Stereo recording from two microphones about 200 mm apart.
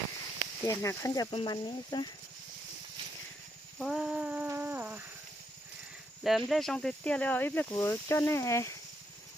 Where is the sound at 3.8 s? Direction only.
Centre (ahead or behind).